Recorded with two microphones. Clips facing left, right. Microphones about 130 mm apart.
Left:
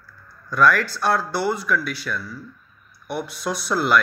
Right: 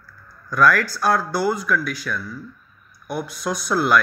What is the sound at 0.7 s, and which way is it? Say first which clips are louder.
Speech: right 1 dB; 30° left (ahead or behind).